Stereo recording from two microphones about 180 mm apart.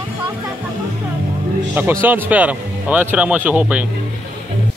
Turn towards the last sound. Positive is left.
turn(degrees=-5)  # may be behind; listen again after turning